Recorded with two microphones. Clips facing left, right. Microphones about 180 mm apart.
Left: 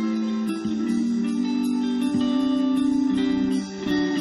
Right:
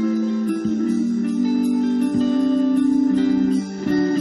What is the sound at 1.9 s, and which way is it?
Music, 40° right (ahead or behind).